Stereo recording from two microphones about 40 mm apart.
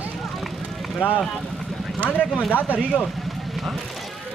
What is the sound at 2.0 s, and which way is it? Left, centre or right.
Speech, left.